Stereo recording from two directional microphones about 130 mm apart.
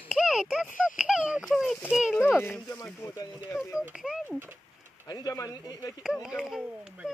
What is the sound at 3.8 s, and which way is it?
Speech, 5° right (ahead or behind).